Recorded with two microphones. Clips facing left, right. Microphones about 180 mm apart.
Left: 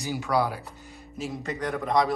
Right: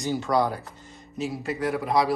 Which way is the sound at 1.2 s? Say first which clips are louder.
Right 3 dB; 5° right (ahead or behind).